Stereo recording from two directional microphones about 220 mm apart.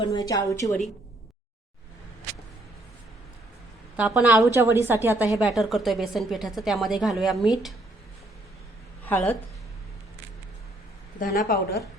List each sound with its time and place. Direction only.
0.0 s a woman's voice: 20° left (ahead or behind)
3.9 s a woman's voice: 5° right (ahead or behind)
9.0 s a woman's voice: 10° left (ahead or behind)
11.2 s speech: 40° left (ahead or behind)